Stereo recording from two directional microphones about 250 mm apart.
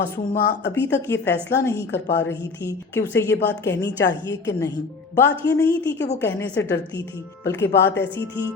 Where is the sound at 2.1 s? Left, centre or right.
Left.